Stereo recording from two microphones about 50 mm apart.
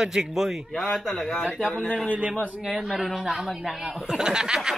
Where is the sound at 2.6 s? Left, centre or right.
Centre.